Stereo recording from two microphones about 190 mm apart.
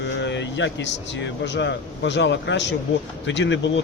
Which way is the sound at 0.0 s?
70° left (ahead or behind).